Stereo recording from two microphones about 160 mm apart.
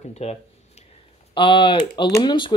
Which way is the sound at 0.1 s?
40° left (ahead or behind).